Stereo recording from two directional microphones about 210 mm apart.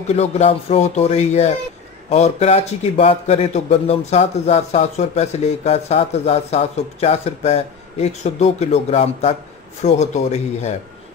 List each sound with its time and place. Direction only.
0.1 s a man's voice: 30° left (ahead or behind)